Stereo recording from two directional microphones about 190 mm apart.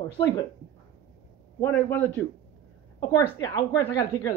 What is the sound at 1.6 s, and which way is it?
Speech, 10° left (ahead or behind).